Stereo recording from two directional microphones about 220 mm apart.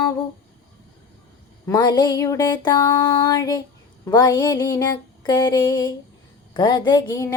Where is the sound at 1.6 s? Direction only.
20° left (ahead or behind).